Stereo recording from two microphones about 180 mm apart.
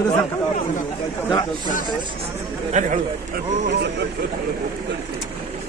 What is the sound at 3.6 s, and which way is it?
Speech, 70° right (ahead or behind).